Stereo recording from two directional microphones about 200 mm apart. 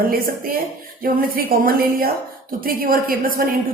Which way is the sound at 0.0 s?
45° right (ahead or behind).